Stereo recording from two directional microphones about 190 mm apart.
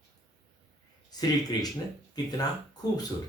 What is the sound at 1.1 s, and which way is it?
Speech, 20° left (ahead or behind).